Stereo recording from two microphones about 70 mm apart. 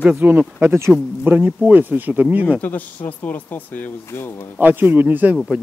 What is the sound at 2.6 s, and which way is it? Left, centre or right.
A man's voice, left.